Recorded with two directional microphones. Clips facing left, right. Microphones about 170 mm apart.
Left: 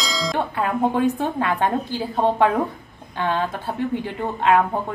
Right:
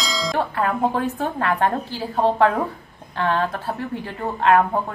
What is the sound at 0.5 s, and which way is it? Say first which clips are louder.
A woman's voice: left 2 dB; 15° left (ahead or behind).